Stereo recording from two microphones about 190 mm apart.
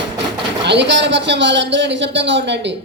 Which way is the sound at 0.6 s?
65° right (ahead or behind).